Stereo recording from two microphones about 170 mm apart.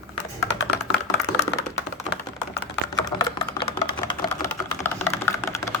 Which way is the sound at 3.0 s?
20° left (ahead or behind).